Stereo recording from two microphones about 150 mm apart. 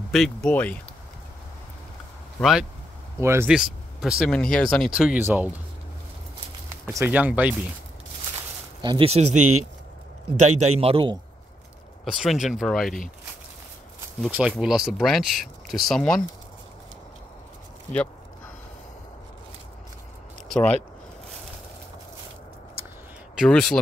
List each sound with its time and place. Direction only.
0.1 s speech: 5° left (ahead or behind)
3.2 s speech: 15° right (ahead or behind)
3.4 s speech: 5° right (ahead or behind)
6.9 s speech: 15° right (ahead or behind)
8.8 s a man's voice: 35° right (ahead or behind)
10.4 s a man's voice: 45° right (ahead or behind)
12.0 s speech: centre (ahead or behind)
14.3 s speech: 5° right (ahead or behind)
20.4 s speech: 5° left (ahead or behind)
23.3 s speech: centre (ahead or behind)